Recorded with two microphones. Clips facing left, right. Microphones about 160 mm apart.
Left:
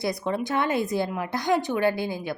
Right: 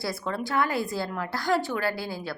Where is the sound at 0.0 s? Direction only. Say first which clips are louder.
Left 4 dB; 20° left (ahead or behind).